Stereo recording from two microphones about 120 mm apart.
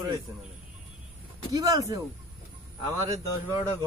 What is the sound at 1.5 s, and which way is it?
Speech, 30° right (ahead or behind).